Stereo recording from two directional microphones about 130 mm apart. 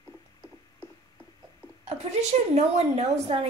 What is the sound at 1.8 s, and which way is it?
A woman's voice, 55° right (ahead or behind).